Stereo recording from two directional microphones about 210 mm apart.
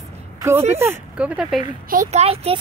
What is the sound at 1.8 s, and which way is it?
Speech, 35° right (ahead or behind).